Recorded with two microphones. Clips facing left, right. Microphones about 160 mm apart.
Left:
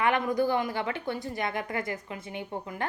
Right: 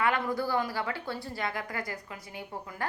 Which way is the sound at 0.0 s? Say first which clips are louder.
Left 3 dB; 20° left (ahead or behind).